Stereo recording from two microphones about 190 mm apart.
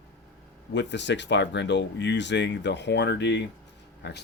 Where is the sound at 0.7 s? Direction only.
65° left (ahead or behind).